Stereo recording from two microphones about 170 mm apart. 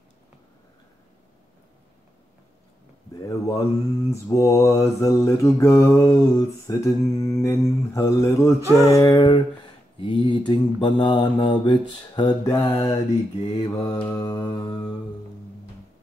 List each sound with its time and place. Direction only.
3.3 s mantra: 20° left (ahead or behind)